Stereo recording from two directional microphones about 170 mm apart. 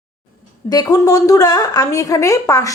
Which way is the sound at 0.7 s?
20° left (ahead or behind).